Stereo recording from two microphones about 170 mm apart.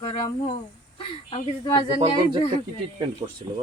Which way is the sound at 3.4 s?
30° right (ahead or behind).